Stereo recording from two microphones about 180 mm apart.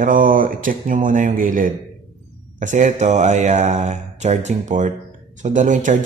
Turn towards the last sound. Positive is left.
turn(degrees=-45)  # may be behind; listen again after turning